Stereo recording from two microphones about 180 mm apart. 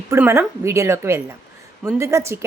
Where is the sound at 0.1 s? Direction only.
15° right (ahead or behind).